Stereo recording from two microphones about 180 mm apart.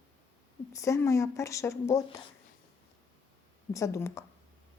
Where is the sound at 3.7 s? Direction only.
15° left (ahead or behind).